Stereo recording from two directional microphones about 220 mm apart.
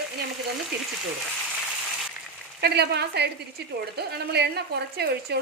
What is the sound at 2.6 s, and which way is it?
A woman's voice, 50° right (ahead or behind).